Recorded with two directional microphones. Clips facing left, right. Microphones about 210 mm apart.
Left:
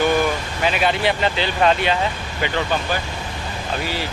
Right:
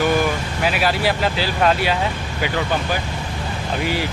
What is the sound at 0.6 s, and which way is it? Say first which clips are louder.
Speech: left 1 dB; 5° right (ahead or behind).